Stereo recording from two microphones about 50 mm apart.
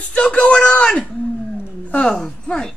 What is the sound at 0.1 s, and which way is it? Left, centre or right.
Speech, left.